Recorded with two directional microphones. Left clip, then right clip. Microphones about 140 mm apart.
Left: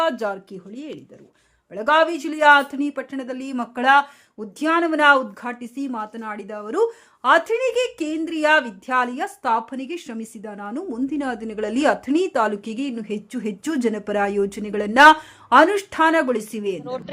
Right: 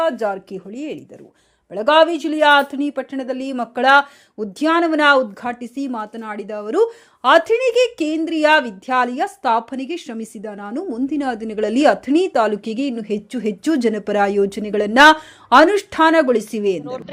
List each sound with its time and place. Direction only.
0.5 s speech: 15° right (ahead or behind)